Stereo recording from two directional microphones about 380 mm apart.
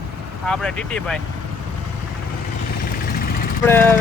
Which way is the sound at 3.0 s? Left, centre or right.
Left.